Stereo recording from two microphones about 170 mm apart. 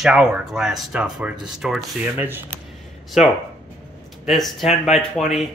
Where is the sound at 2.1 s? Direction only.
15° right (ahead or behind).